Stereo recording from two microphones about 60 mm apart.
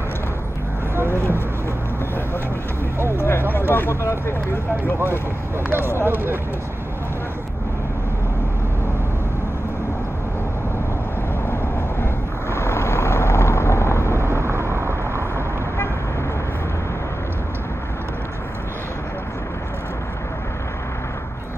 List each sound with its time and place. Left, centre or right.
3.2 s a sound: left
4.0 s speech: left
5.7 s speech: right
12.0 s vehicle: left
14.2 s vehicle: right